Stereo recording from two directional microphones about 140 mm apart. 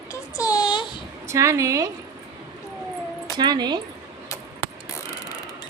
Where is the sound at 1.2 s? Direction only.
20° right (ahead or behind).